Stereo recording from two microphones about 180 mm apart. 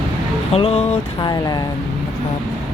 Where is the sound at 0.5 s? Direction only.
35° left (ahead or behind).